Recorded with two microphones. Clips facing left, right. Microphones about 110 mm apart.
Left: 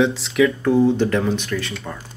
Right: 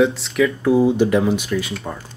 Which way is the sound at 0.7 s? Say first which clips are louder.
Right 1 dB; 10° right (ahead or behind).